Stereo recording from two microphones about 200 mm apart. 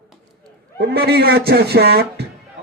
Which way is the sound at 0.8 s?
50° right (ahead or behind).